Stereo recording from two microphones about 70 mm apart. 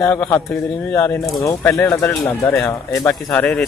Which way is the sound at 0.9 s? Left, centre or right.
Left.